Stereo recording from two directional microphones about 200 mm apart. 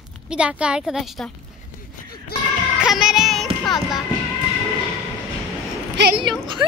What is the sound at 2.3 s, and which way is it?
Music, 50° left (ahead or behind).